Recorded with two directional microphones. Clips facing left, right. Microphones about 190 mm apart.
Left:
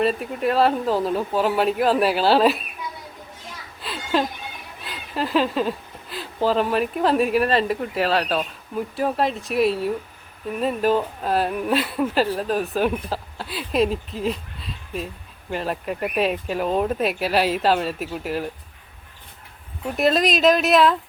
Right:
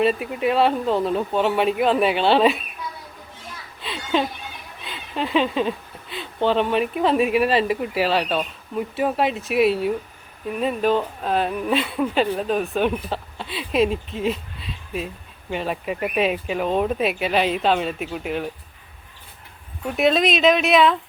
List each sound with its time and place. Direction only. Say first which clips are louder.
0.0 s speech: right 1 dB; centre (ahead or behind)
3.8 s a sound: even; centre (ahead or behind)
4.8 s speech: even; centre (ahead or behind)
20.0 s speech: right 1 dB; centre (ahead or behind)